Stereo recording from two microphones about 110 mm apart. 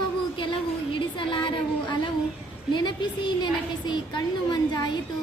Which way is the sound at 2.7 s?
45° left (ahead or behind).